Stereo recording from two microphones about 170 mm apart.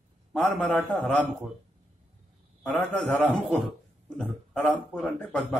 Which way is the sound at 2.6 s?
5° left (ahead or behind).